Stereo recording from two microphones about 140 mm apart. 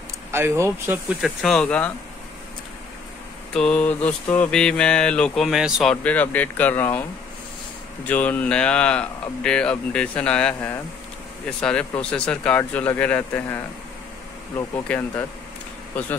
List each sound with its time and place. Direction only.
0.3 s speech: 20° right (ahead or behind)
1.2 s mantra: 5° left (ahead or behind)
3.5 s mantra: 5° left (ahead or behind)
6.0 s speech: 10° left (ahead or behind)
8.1 s speech: 10° left (ahead or behind)
14.9 s speech: 15° left (ahead or behind)